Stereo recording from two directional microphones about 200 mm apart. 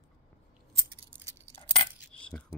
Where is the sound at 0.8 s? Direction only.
15° right (ahead or behind).